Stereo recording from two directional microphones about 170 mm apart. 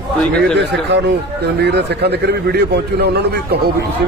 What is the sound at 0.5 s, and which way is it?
A man's voice, 90° right.